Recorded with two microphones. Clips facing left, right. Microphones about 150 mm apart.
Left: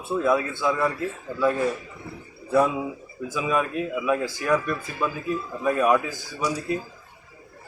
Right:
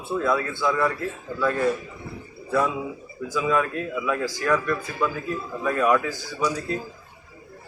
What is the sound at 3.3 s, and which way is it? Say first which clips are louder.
A man's voice: right 2 dB; 15° left (ahead or behind).